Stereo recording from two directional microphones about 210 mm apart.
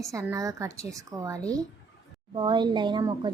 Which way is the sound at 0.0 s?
15° right (ahead or behind).